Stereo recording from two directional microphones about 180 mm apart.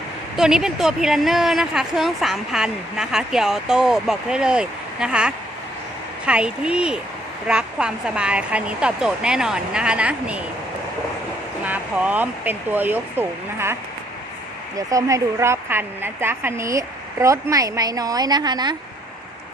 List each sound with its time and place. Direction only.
0.3 s speech: 5° right (ahead or behind)
11.6 s speech: 10° right (ahead or behind)
14.8 s a woman's voice: 20° right (ahead or behind)